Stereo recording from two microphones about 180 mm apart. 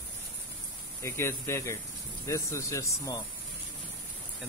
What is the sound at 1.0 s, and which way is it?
Speech, 15° left (ahead or behind).